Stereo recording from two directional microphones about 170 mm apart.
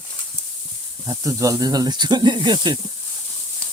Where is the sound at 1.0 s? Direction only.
20° right (ahead or behind).